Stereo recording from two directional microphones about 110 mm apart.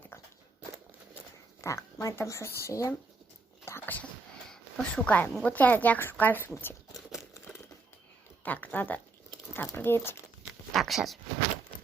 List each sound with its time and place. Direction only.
1.6 s speech: 30° left (ahead or behind)
3.7 s whispering: 20° left (ahead or behind)
4.4 s a woman's voice: 5° left (ahead or behind)
8.4 s speech: 15° left (ahead or behind)
10.7 s speech: centre (ahead or behind)